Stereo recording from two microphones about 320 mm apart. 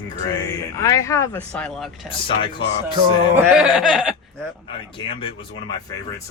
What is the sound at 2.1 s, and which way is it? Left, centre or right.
Speech, centre.